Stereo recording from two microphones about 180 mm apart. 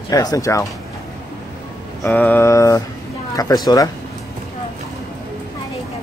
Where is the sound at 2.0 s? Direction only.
10° left (ahead or behind).